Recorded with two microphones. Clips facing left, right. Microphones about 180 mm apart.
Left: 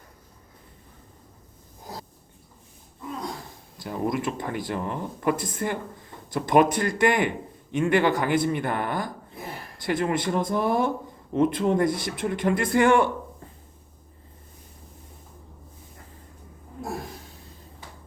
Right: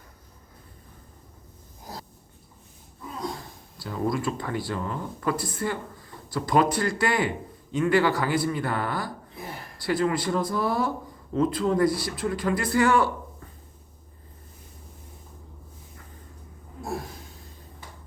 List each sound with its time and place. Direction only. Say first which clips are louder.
3.8 s speech: even; 20° left (ahead or behind)